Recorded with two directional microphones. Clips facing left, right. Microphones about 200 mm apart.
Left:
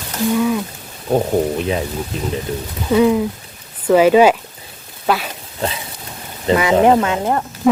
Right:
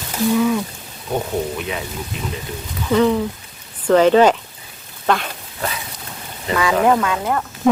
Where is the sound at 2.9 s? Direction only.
10° left (ahead or behind).